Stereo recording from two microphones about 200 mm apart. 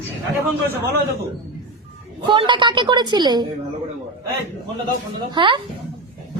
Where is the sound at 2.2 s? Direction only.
25° right (ahead or behind).